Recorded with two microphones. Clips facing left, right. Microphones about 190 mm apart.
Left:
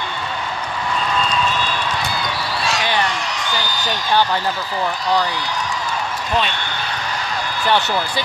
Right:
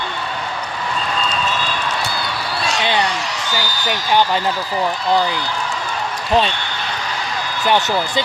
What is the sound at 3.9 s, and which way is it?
Speech, 15° right (ahead or behind).